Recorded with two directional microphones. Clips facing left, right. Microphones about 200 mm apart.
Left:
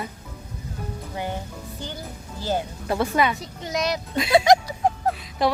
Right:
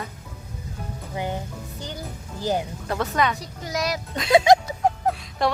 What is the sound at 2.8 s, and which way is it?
A woman's voice, 10° left (ahead or behind).